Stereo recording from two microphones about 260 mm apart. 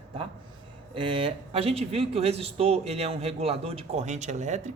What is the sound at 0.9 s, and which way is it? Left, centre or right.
Speech, centre.